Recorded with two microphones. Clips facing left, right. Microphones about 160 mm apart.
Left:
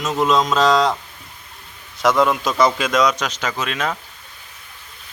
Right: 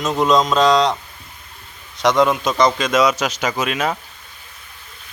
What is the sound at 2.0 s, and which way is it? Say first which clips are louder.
A man's voice: right 1 dB; 5° left (ahead or behind).